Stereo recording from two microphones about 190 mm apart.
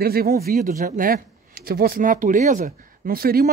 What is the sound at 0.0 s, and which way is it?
A man's voice, 55° right (ahead or behind).